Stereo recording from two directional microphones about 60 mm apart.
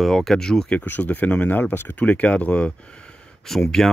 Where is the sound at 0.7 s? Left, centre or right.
Left.